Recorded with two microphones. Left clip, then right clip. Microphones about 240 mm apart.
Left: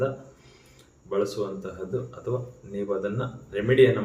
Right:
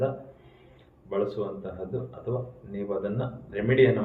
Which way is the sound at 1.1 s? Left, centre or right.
Centre.